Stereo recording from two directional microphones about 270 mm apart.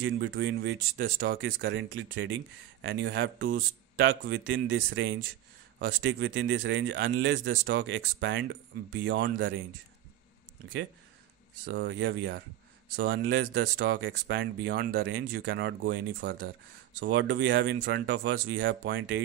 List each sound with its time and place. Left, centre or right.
0.0 s speech: right
11.6 s speech: right